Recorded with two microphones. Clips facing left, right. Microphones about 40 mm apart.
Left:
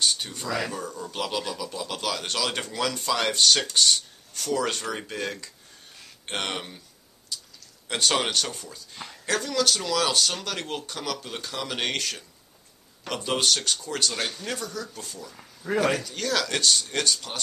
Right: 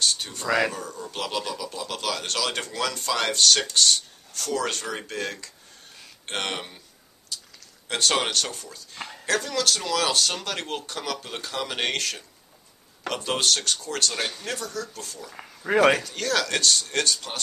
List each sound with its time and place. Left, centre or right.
0.0 s a sound: centre
0.5 s speech: right
0.7 s speech: centre
7.9 s speech: centre
14.1 s speech: centre
15.3 s speech: right
16.0 s speech: centre